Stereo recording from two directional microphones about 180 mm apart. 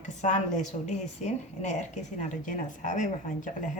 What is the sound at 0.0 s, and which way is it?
A woman's voice, 40° left (ahead or behind).